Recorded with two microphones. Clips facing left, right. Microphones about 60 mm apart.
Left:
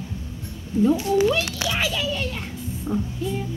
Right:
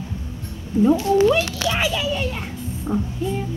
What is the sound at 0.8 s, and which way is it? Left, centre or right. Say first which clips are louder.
A child's voice: right 3 dB; right.